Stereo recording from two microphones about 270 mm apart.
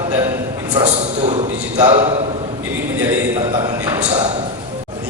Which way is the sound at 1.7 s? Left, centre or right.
Centre.